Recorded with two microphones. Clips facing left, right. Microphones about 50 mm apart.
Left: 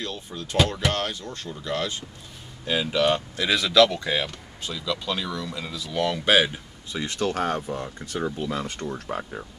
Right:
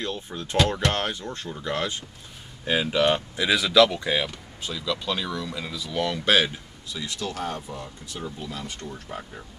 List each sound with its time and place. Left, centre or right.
0.0 s speech: right; by 6.5 s centre
6.9 s speech: left